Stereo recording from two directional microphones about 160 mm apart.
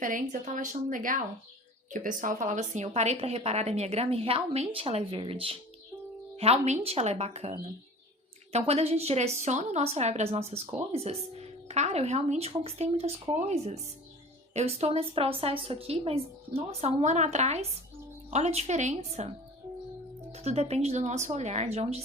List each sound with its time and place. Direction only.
0.0 s a woman's voice: 55° right (ahead or behind)
20.3 s speech: 40° right (ahead or behind)